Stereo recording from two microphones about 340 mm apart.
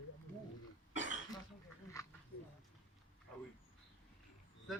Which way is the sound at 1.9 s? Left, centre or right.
Centre.